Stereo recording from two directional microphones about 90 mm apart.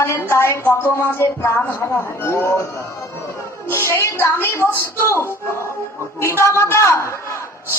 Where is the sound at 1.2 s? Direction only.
25° left (ahead or behind).